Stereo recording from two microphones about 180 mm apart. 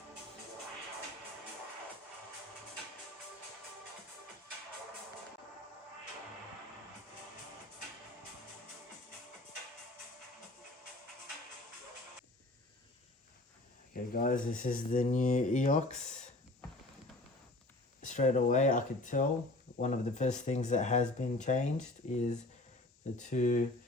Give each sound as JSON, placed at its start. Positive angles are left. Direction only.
{"t": 13.9, "sound": "speech", "side_deg": 50}
{"t": 18.0, "sound": "speech", "side_deg": 45}